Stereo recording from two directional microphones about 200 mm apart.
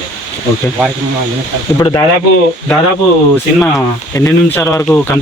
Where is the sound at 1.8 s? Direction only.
20° left (ahead or behind).